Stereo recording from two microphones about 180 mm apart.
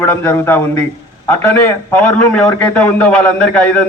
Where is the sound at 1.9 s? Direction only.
10° left (ahead or behind).